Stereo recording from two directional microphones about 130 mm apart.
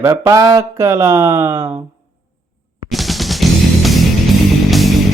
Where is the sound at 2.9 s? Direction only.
Centre (ahead or behind).